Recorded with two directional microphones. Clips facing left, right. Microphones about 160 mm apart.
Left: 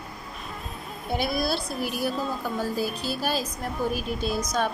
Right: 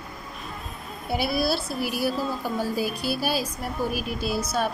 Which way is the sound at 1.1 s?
5° right (ahead or behind).